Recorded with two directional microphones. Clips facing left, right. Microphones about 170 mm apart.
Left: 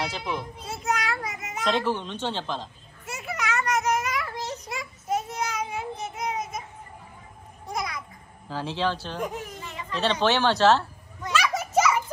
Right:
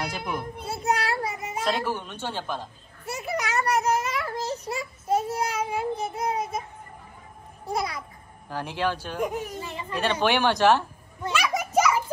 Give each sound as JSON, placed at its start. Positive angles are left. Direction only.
{"t": 0.7, "sound": "a child's voice", "side_deg": -30}
{"t": 1.6, "sound": "a woman's voice", "side_deg": -10}
{"t": 3.1, "sound": "a sound", "side_deg": -35}
{"t": 7.6, "sound": "a child's voice", "side_deg": -30}
{"t": 8.5, "sound": "a woman's voice", "side_deg": -15}
{"t": 9.6, "sound": "a sound", "side_deg": -30}
{"t": 9.9, "sound": "a woman's voice", "side_deg": -10}
{"t": 11.4, "sound": "children playing", "side_deg": -15}